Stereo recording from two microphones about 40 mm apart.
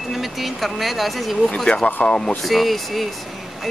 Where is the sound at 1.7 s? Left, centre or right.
Left.